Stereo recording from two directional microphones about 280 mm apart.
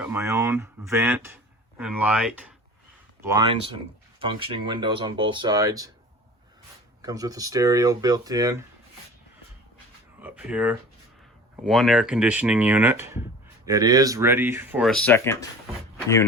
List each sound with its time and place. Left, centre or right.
0.0 s speech: centre
7.0 s speech: centre
10.2 s speech: centre